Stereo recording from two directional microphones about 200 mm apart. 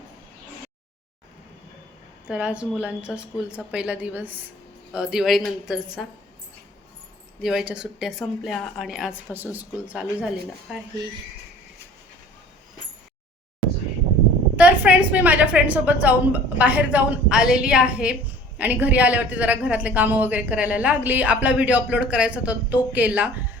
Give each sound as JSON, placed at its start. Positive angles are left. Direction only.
{"t": 2.2, "sound": "speech", "side_deg": -5}
{"t": 7.4, "sound": "speech", "side_deg": -5}
{"t": 14.5, "sound": "a woman's voice", "side_deg": -5}